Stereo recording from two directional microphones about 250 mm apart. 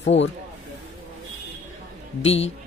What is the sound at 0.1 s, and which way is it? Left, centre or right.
Speech, left.